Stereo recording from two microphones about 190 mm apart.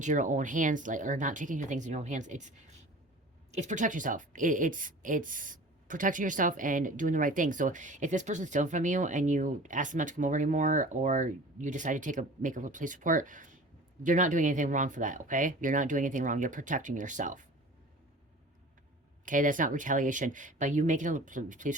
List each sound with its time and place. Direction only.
0.0 s speech: 40° right (ahead or behind)
19.2 s speech: 45° right (ahead or behind)